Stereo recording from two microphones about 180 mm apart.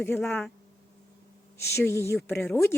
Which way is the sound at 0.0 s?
10° left (ahead or behind).